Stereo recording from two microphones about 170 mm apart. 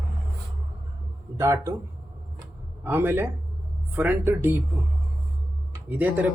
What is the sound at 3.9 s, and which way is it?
Speech, 10° right (ahead or behind).